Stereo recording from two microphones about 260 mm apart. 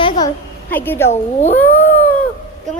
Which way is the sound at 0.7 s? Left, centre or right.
Centre.